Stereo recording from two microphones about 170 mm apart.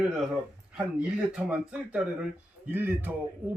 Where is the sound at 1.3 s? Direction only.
5° right (ahead or behind).